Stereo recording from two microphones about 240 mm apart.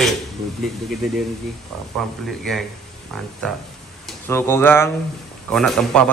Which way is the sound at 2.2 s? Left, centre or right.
Centre.